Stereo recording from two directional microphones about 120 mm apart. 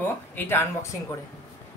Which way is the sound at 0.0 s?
20° left (ahead or behind).